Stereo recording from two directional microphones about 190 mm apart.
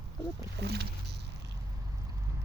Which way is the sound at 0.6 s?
60° right (ahead or behind).